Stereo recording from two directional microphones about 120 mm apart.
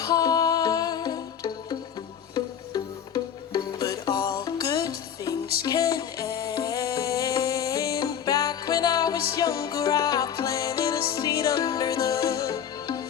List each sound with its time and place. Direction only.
0.0 s music: 30° left (ahead or behind)
3.5 s music: 35° left (ahead or behind)